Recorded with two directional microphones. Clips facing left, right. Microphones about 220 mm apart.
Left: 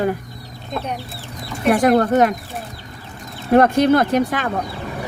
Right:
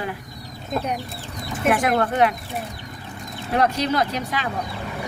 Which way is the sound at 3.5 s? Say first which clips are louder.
Left 8 dB; 50° left (ahead or behind).